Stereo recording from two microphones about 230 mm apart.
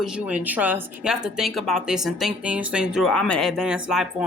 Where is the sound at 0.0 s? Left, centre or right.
Centre.